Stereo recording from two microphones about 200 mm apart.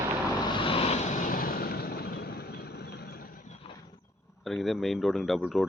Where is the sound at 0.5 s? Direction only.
25° left (ahead or behind); by 3.3 s 50° left (ahead or behind).